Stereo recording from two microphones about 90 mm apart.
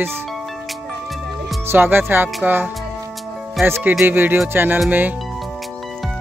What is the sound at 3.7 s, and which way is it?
Speech, 25° right (ahead or behind).